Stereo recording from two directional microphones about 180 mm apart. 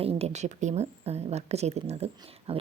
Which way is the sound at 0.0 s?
35° right (ahead or behind).